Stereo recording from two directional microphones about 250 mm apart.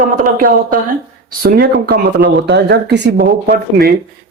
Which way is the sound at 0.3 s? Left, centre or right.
Right.